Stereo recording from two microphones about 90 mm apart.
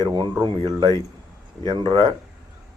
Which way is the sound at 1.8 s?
65° right (ahead or behind).